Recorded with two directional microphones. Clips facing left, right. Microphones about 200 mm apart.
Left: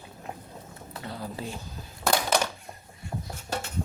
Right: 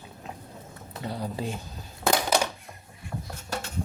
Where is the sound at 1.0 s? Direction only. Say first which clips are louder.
Right 4 dB; 20° right (ahead or behind).